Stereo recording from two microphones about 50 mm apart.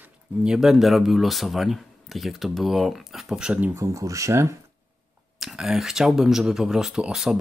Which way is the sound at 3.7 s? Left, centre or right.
Right.